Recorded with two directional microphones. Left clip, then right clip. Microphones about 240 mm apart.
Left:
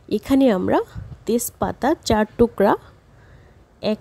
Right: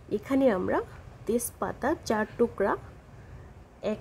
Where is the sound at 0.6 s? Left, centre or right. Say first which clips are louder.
Left 9 dB; left.